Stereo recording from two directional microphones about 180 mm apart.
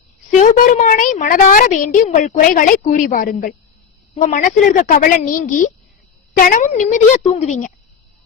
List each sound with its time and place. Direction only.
0.3 s a woman's voice: 45° left (ahead or behind)